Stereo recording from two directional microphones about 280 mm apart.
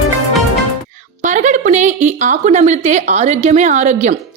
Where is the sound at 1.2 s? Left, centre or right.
Right.